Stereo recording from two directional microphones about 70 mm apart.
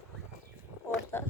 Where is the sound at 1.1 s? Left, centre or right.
Left.